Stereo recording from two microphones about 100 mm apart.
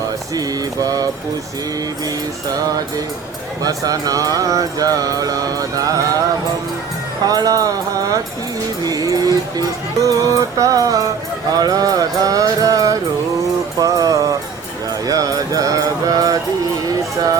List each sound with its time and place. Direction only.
0.3 s speech: 35° right (ahead or behind)
3.6 s speech: 40° right (ahead or behind)
7.3 s speech: 40° right (ahead or behind)
13.7 s music: 35° right (ahead or behind)
15.0 s mantra: 35° right (ahead or behind)